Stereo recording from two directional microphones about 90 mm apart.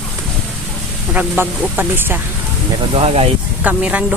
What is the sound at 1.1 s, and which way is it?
Speech, 20° right (ahead or behind).